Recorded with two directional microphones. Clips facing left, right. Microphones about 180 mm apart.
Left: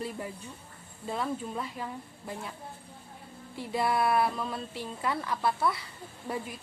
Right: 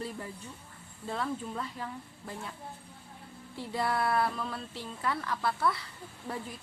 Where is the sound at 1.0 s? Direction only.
15° left (ahead or behind).